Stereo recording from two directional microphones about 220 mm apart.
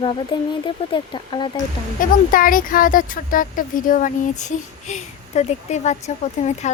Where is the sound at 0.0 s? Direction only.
20° left (ahead or behind).